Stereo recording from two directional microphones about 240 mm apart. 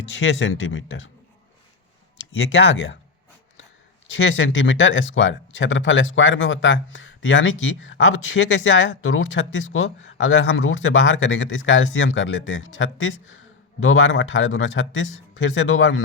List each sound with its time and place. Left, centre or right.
0.2 s speech: left
2.3 s speech: left
4.1 s speech: left